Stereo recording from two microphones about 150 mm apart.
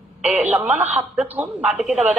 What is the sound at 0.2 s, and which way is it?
Telephone, 10° right (ahead or behind).